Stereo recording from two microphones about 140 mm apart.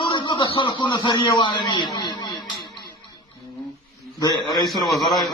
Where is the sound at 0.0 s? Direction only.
35° left (ahead or behind).